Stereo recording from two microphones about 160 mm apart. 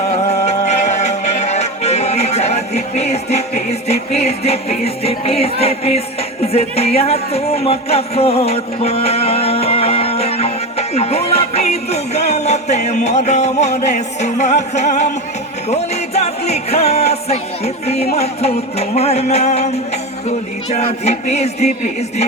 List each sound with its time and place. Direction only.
0.1 s music: 45° left (ahead or behind)
6.4 s speech: 40° left (ahead or behind)
15.7 s music: 40° left (ahead or behind)